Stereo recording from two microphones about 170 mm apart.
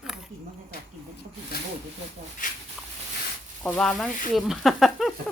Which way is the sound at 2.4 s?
50° left (ahead or behind).